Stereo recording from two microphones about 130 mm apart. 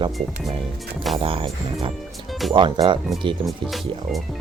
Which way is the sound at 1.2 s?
45° right (ahead or behind).